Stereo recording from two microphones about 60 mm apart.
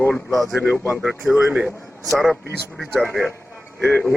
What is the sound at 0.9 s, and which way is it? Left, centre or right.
Speech, centre.